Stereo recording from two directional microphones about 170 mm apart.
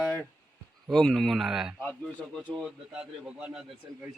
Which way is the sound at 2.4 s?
5° right (ahead or behind).